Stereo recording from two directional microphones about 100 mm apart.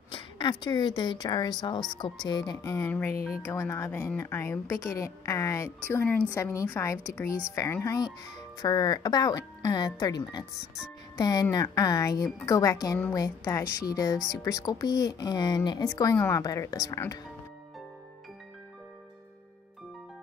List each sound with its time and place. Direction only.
0.1 s speech: 50° left (ahead or behind)
2.6 s a woman's voice: 30° left (ahead or behind)
5.9 s speech: 20° left (ahead or behind)
6.3 s a woman's voice: 30° left (ahead or behind)
15.8 s a woman's voice: 35° left (ahead or behind)